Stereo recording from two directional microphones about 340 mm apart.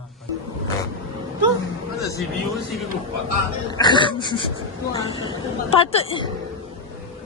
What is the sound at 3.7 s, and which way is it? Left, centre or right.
A woman's voice, centre.